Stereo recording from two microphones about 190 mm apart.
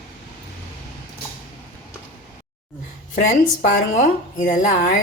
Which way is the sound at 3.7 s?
40° left (ahead or behind).